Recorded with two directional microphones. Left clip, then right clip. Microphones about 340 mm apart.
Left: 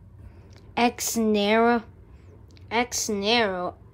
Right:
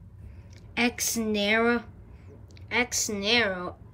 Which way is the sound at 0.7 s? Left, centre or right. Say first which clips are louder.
Left 4 dB; centre.